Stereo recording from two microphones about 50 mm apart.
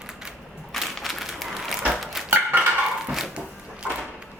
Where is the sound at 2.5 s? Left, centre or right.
Right.